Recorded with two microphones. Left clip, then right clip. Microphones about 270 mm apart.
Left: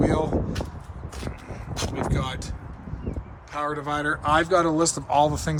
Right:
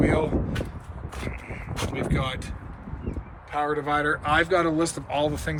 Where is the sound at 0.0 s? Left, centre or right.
Centre.